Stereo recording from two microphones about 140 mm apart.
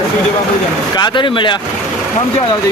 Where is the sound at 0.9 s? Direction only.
35° left (ahead or behind).